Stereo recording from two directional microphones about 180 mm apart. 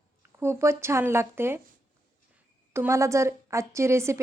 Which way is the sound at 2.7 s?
15° right (ahead or behind).